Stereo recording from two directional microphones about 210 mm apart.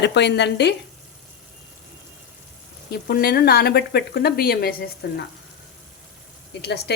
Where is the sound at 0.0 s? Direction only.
55° left (ahead or behind).